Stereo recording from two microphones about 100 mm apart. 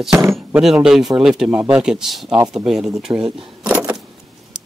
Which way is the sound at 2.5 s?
5° right (ahead or behind).